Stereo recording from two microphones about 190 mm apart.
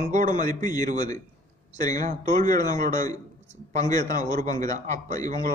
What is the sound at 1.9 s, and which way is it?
Speech, 40° right (ahead or behind).